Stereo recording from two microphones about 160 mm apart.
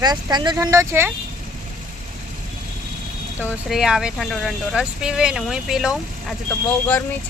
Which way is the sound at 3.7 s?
Centre (ahead or behind).